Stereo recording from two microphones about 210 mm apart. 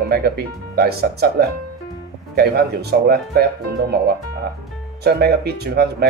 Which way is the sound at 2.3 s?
50° right (ahead or behind).